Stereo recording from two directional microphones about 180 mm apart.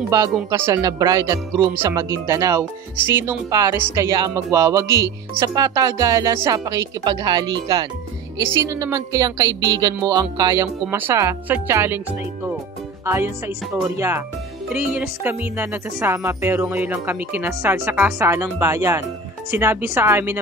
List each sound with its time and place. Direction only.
0.5 s speech: 15° right (ahead or behind)
13.0 s speech: 15° right (ahead or behind)